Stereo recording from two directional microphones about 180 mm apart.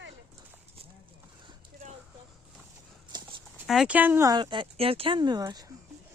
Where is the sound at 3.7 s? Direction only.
5° right (ahead or behind); by 5.7 s 20° right (ahead or behind).